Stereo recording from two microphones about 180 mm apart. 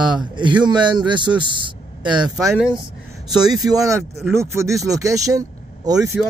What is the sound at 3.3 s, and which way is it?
Speech, 20° right (ahead or behind).